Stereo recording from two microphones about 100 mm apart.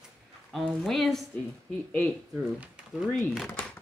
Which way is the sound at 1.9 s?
20° left (ahead or behind).